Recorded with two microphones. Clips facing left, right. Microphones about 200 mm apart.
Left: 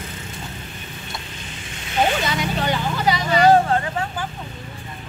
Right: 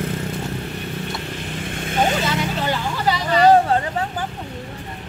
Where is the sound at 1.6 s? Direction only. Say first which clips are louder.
Even; 50° right (ahead or behind).